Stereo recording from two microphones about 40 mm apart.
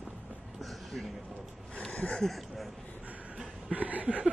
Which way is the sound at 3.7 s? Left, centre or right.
Right.